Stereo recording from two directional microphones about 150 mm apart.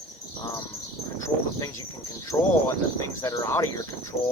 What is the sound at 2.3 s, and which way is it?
Speech, 20° left (ahead or behind).